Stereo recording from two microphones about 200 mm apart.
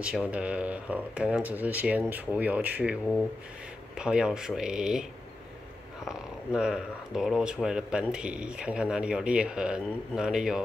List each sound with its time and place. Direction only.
0.0 s speech: 5° right (ahead or behind)
6.0 s speech: 5° right (ahead or behind)